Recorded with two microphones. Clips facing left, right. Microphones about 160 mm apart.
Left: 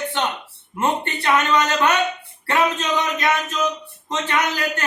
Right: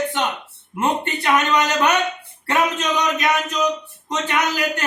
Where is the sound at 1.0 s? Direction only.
15° right (ahead or behind).